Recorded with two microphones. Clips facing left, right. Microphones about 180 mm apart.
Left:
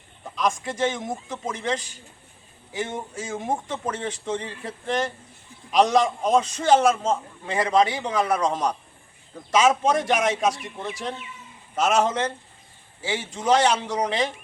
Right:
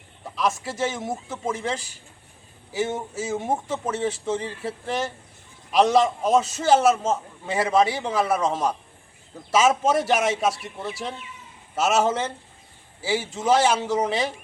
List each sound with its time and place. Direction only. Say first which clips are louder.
0.3 s a man's voice: even; 5° right (ahead or behind)